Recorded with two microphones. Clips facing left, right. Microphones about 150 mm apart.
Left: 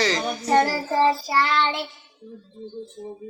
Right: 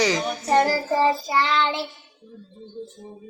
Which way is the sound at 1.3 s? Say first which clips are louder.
Even; centre (ahead or behind).